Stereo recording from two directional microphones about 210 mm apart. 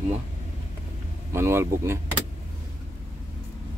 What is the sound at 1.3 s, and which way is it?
Speech, 10° right (ahead or behind).